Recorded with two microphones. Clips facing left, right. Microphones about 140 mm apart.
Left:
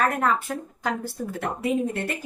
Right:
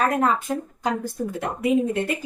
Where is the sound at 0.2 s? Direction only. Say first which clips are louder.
Right 2 dB; 20° right (ahead or behind).